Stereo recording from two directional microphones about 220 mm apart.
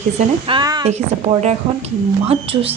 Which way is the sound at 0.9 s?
30° right (ahead or behind).